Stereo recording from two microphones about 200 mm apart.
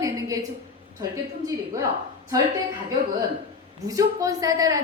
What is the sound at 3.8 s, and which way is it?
Speech, 15° right (ahead or behind).